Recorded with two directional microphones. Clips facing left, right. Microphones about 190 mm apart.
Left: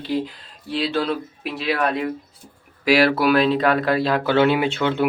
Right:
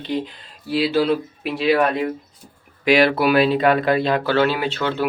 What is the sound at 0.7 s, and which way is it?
Speech, 5° right (ahead or behind).